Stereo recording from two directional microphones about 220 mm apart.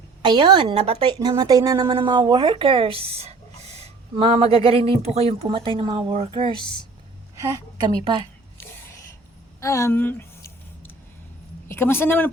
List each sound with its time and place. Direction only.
0.2 s a woman's voice: 20° right (ahead or behind)
6.6 s speech: 20° left (ahead or behind)
7.3 s a woman's voice: 15° right (ahead or behind)
9.6 s speech: 15° left (ahead or behind)
11.7 s speech: 10° left (ahead or behind)